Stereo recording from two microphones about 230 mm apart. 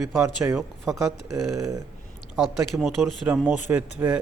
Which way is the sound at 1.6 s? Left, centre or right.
Centre.